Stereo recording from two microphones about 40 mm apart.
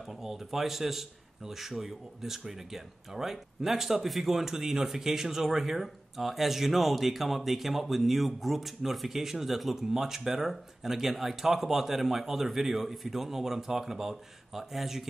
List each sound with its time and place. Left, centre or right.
0.2 s a man's voice: centre